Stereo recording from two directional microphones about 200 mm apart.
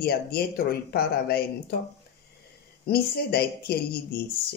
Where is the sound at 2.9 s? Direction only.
50° left (ahead or behind).